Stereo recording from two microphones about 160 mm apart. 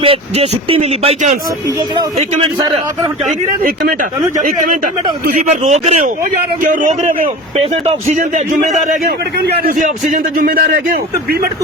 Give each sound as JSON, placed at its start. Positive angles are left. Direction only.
{"t": 0.0, "sound": "speech", "side_deg": -35}
{"t": 4.4, "sound": "speech", "side_deg": -55}
{"t": 5.5, "sound": "a man's voice", "side_deg": -45}
{"t": 8.2, "sound": "a man's voice", "side_deg": -55}
{"t": 9.0, "sound": "a man's voice", "side_deg": -85}